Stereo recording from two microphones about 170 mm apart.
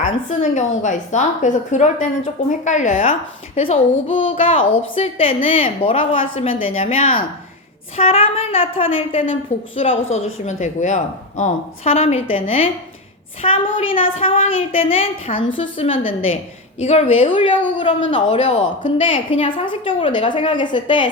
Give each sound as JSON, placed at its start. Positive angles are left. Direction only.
{"t": 0.0, "sound": "a woman's voice", "side_deg": 45}
{"t": 3.6, "sound": "a woman's voice", "side_deg": 30}